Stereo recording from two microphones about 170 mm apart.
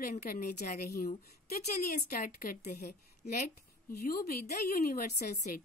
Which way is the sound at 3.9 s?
60° left (ahead or behind).